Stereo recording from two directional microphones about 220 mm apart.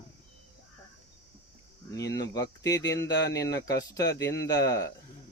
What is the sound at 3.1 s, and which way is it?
Speech, 50° left (ahead or behind).